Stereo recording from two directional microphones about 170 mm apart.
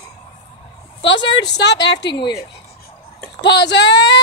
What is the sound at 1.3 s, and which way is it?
Speech, 90° left.